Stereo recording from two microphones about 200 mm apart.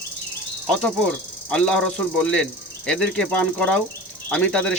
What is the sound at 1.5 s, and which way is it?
Speech, 5° left (ahead or behind).